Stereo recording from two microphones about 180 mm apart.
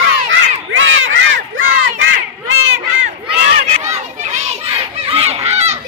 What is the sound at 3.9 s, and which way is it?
Children playing, 40° right (ahead or behind).